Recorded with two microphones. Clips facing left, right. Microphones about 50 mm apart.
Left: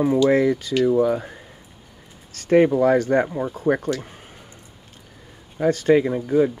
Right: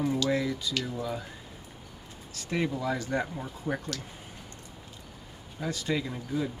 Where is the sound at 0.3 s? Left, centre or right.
Left.